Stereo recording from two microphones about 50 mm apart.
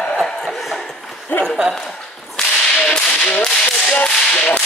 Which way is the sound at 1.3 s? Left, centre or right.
Left.